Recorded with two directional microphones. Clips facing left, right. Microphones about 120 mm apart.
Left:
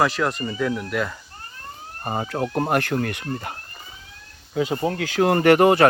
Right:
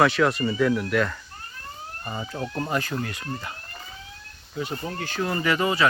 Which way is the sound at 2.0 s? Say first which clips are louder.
Left 7 dB; 70° left (ahead or behind).